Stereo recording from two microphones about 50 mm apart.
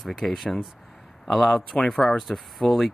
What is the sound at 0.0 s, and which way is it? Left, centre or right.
Speech, centre.